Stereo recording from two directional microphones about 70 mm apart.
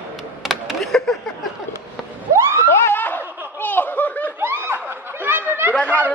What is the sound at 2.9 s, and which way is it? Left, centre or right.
Laughter, left.